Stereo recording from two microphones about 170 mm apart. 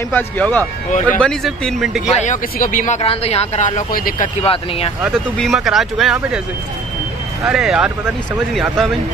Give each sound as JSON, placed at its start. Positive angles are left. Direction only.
{"t": 0.1, "sound": "speech", "side_deg": 10}
{"t": 2.1, "sound": "speech", "side_deg": 50}
{"t": 4.4, "sound": "speech", "side_deg": 35}
{"t": 5.0, "sound": "speech", "side_deg": 0}
{"t": 7.4, "sound": "speech", "side_deg": -5}